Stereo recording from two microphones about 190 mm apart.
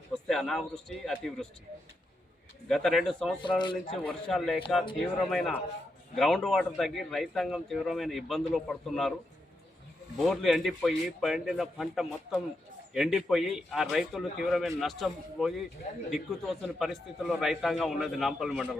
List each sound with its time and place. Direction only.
0.1 s a man's voice: centre (ahead or behind)
2.6 s a man's voice: centre (ahead or behind)
3.6 s a man's voice: 25° left (ahead or behind)
4.0 s a man's voice: centre (ahead or behind)
10.2 s a man's voice: centre (ahead or behind)